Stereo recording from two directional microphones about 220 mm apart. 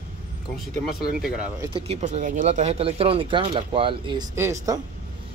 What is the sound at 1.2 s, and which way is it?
Speech, 5° right (ahead or behind).